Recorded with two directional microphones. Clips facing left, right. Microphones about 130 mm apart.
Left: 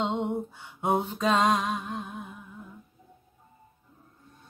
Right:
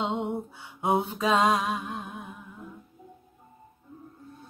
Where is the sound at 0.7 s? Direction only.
5° right (ahead or behind).